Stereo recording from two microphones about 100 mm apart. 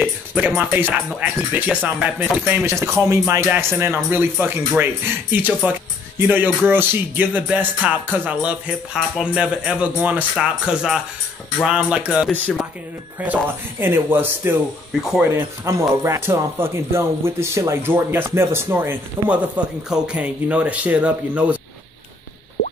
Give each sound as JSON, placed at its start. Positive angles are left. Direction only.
{"t": 0.7, "sound": "speech", "side_deg": -20}
{"t": 3.4, "sound": "speech", "side_deg": -20}
{"t": 15.0, "sound": "speech", "side_deg": -5}
{"t": 15.2, "sound": "speech", "side_deg": -25}